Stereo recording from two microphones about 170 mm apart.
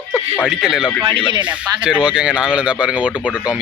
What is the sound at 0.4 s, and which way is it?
Speech, centre (ahead or behind).